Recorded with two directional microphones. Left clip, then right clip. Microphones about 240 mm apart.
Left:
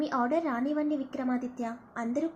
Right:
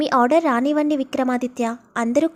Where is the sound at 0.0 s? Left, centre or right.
Right.